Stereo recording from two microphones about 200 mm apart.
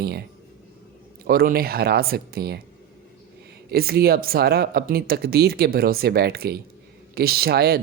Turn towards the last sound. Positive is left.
turn(degrees=-50)  # may be behind; listen again after turning